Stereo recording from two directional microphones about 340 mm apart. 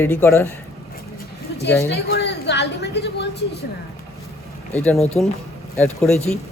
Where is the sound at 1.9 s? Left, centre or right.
Left.